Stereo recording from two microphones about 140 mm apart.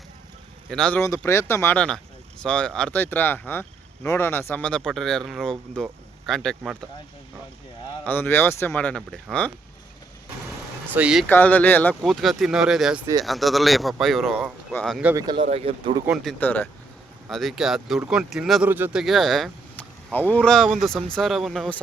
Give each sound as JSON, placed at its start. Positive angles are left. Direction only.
{"t": 0.7, "sound": "speech", "side_deg": 5}
{"t": 0.9, "sound": "speech", "side_deg": 20}
{"t": 8.0, "sound": "speech", "side_deg": 15}
{"t": 10.9, "sound": "speech", "side_deg": -5}
{"t": 11.3, "sound": "speech", "side_deg": 15}
{"t": 12.0, "sound": "speech", "side_deg": 0}
{"t": 15.1, "sound": "speech", "side_deg": -30}
{"t": 15.4, "sound": "speech", "side_deg": -45}
{"t": 16.0, "sound": "speech", "side_deg": 0}
{"t": 16.4, "sound": "speech", "side_deg": 15}
{"t": 17.2, "sound": "speech", "side_deg": 0}
{"t": 18.7, "sound": "speech", "side_deg": -15}
{"t": 19.0, "sound": "speech", "side_deg": 0}
{"t": 19.7, "sound": "speech", "side_deg": 10}